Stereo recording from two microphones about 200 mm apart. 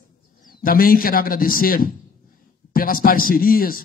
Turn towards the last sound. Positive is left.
turn(degrees=45)  # may be behind; listen again after turning